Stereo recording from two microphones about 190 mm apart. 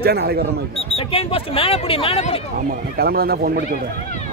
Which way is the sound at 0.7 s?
30° left (ahead or behind).